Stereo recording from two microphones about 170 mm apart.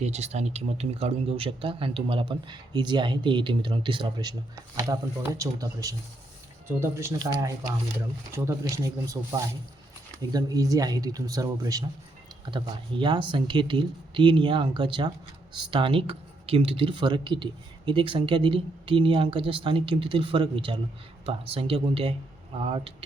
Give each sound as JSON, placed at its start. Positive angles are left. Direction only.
{"t": 0.0, "sound": "speech", "side_deg": -40}
{"t": 8.4, "sound": "speech", "side_deg": -20}